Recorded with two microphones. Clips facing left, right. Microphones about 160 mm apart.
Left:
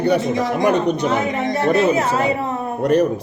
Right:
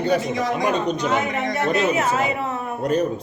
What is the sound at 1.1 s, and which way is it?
A woman's voice, 30° left (ahead or behind).